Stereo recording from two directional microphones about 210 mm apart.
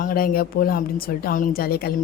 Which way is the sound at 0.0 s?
45° left (ahead or behind).